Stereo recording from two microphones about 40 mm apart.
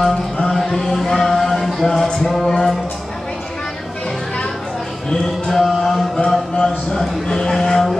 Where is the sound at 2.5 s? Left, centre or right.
Centre.